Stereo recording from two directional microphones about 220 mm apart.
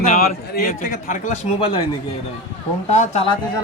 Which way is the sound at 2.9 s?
30° left (ahead or behind).